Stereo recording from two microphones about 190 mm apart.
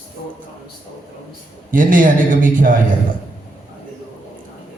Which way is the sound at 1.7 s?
45° right (ahead or behind).